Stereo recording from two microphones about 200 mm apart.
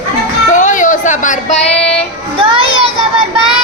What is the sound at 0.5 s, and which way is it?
Music, 40° left (ahead or behind).